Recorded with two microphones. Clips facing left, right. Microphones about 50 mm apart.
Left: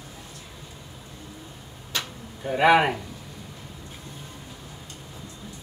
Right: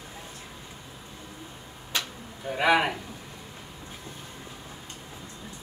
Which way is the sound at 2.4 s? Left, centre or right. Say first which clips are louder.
Left 4 dB; centre.